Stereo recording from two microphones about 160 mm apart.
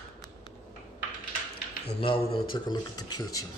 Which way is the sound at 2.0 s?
35° left (ahead or behind).